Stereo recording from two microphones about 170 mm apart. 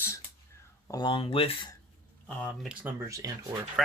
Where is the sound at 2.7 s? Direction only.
10° right (ahead or behind).